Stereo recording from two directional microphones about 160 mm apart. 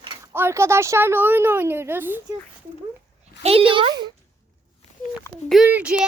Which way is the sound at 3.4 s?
35° right (ahead or behind).